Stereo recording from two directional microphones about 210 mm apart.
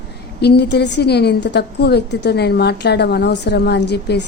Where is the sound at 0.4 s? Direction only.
55° left (ahead or behind).